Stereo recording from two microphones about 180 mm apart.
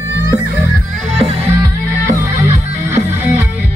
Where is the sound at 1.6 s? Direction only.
20° right (ahead or behind).